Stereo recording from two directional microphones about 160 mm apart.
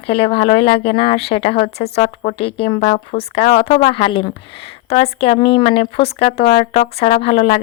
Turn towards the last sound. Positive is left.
turn(degrees=40)  # may be behind; listen again after turning